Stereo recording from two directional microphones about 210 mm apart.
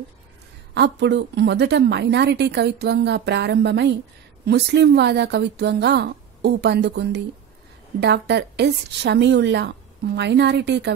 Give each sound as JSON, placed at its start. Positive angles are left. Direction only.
{"t": 0.7, "sound": "a woman's voice", "side_deg": -55}